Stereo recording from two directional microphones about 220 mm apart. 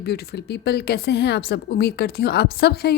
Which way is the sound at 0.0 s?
45° left (ahead or behind).